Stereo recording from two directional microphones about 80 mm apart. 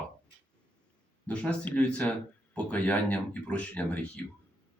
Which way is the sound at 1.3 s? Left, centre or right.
Centre.